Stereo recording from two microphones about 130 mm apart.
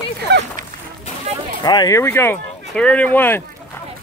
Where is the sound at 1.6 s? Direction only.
30° left (ahead or behind).